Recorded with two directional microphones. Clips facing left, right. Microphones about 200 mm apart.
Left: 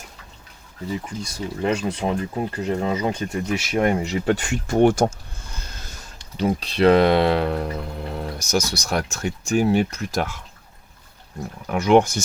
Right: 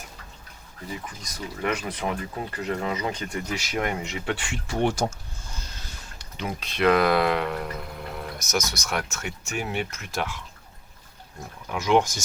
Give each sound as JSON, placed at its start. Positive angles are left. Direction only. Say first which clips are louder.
{"t": 1.0, "sound": "speech", "louder": "left 7 dB", "side_deg": 30}
{"t": 5.9, "sound": "speech", "louder": "left 2 dB", "side_deg": 35}
{"t": 11.6, "sound": "speech", "louder": "left 6 dB", "side_deg": 55}